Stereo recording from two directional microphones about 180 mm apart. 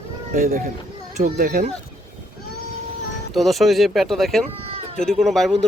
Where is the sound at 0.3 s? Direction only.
50° right (ahead or behind).